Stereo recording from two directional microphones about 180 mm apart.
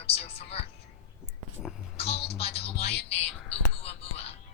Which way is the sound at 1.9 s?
35° left (ahead or behind).